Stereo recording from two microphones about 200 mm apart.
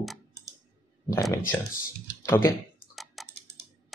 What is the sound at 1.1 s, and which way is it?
Speech, 15° left (ahead or behind).